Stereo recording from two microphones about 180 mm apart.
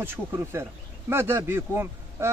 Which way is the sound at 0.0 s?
15° right (ahead or behind).